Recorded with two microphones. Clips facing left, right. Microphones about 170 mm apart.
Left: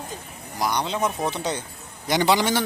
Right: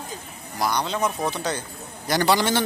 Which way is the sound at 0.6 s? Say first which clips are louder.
Even; 20° left (ahead or behind).